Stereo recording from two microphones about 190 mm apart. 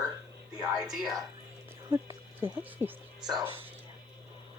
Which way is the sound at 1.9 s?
15° right (ahead or behind).